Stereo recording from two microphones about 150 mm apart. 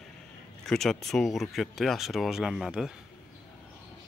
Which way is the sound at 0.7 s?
5° left (ahead or behind).